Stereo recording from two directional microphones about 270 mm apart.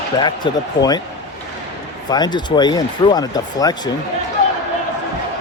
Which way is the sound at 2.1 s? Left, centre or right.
Centre.